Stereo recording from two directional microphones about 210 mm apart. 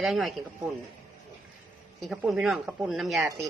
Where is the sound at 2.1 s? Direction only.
5° right (ahead or behind).